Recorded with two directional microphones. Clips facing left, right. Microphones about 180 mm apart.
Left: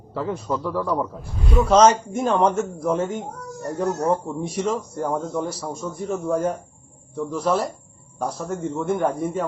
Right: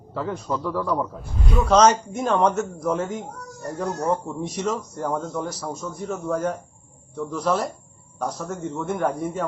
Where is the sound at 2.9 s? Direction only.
25° left (ahead or behind).